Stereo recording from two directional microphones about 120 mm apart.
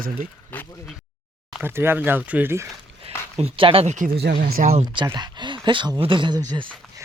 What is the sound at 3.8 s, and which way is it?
Speech, 90° right.